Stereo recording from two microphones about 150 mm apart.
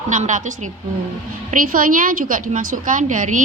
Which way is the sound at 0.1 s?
55° right (ahead or behind).